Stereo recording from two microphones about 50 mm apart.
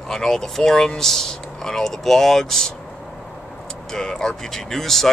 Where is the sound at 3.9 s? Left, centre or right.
Centre.